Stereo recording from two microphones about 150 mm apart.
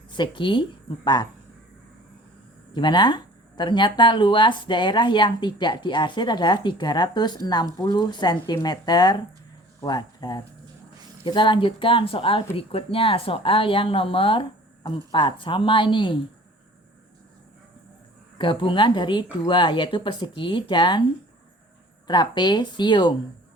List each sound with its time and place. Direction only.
0.1 s speech: 30° left (ahead or behind)
2.7 s speech: 30° left (ahead or behind)
18.3 s speech: 35° left (ahead or behind)
22.0 s speech: 30° left (ahead or behind)